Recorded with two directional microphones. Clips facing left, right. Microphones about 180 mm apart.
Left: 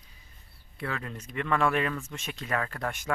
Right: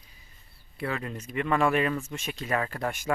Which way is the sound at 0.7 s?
10° right (ahead or behind).